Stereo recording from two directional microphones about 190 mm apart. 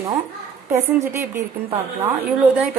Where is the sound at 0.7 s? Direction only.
15° right (ahead or behind).